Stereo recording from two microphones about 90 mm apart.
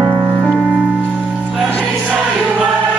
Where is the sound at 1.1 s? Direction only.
15° right (ahead or behind).